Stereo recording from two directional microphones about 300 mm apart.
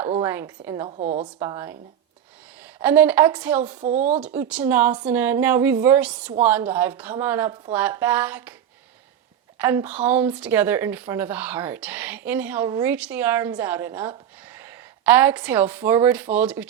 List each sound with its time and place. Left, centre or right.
0.1 s a woman's voice: centre
0.9 s speech: right
1.4 s a woman's voice: centre
2.8 s speech: centre
3.8 s speech: right
4.2 s a woman's voice: centre
9.6 s speech: centre